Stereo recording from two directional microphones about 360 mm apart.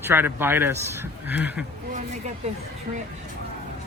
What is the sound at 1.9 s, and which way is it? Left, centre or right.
Speech, centre.